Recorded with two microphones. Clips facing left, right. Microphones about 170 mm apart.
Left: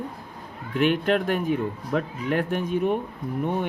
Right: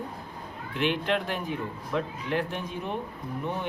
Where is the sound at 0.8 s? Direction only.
45° left (ahead or behind).